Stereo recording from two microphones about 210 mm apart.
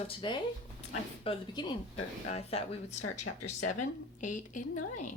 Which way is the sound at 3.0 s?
90° left.